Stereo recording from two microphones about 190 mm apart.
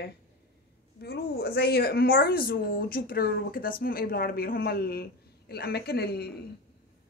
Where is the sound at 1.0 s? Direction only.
55° left (ahead or behind).